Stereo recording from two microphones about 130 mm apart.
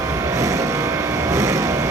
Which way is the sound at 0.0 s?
20° right (ahead or behind).